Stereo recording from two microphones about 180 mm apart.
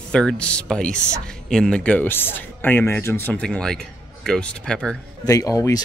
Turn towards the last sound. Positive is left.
turn(degrees=20)  # may be behind; listen again after turning